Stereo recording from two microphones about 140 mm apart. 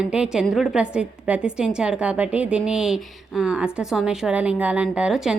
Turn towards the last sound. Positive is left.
turn(degrees=-5)  # may be behind; listen again after turning